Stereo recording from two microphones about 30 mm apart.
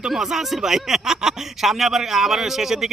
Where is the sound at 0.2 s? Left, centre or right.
Centre.